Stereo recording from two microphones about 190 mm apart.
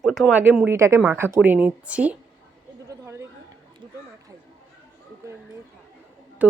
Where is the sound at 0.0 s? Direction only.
Centre (ahead or behind).